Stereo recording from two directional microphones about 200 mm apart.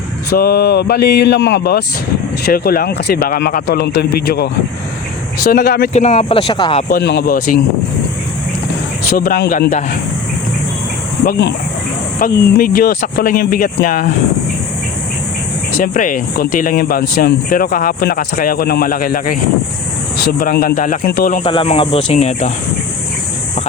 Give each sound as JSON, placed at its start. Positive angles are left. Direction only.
{"t": 0.3, "sound": "speech", "side_deg": 50}
{"t": 5.9, "sound": "speech", "side_deg": 35}
{"t": 6.9, "sound": "speech", "side_deg": 55}
{"t": 9.1, "sound": "speech", "side_deg": 45}
{"t": 11.3, "sound": "speech", "side_deg": 60}
{"t": 12.2, "sound": "speech", "side_deg": 45}
{"t": 15.8, "sound": "speech", "side_deg": 40}
{"t": 21.4, "sound": "speech", "side_deg": 30}